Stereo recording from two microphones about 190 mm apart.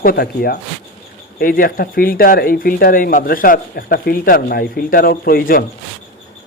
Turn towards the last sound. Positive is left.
turn(degrees=50)  # may be behind; listen again after turning